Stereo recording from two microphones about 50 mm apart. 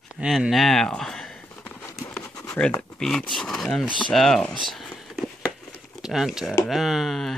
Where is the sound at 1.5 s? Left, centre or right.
Left.